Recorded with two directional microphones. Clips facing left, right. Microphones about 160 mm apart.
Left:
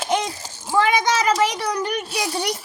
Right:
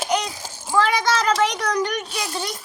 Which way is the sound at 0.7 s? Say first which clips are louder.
Left 1 dB; 15° left (ahead or behind).